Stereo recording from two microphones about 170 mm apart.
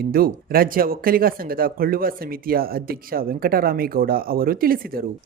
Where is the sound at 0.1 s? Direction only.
60° right (ahead or behind).